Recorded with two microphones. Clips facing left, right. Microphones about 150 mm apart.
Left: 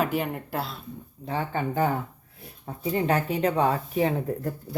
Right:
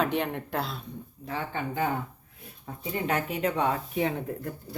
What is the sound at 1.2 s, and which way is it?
Speech, 35° left (ahead or behind).